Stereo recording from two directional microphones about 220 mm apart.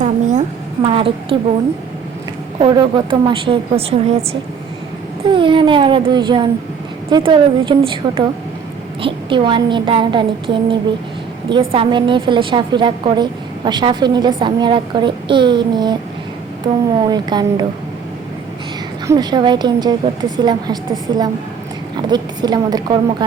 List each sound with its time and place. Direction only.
0.0 s a sound: 35° right (ahead or behind)
2.6 s a woman's voice: 20° right (ahead or behind)
17.1 s a woman's voice: 20° right (ahead or behind)
19.0 s a woman's voice: 20° right (ahead or behind)